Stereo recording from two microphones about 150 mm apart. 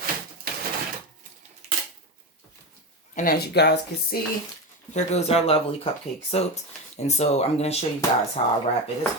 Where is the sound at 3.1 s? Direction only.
80° left.